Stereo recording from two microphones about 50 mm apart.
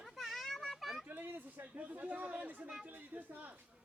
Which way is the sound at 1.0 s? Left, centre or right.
Right.